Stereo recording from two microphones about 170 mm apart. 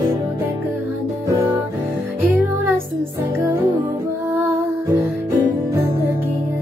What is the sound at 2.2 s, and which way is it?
Music, 10° right (ahead or behind).